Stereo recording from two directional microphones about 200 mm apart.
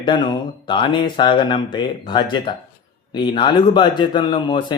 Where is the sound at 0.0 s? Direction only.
25° left (ahead or behind).